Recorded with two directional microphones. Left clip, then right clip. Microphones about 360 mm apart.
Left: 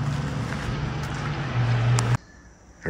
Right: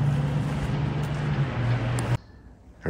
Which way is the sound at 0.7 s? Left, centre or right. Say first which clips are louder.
Even; right.